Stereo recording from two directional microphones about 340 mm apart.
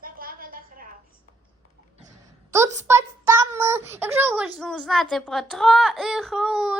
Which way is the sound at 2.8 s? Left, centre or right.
Centre.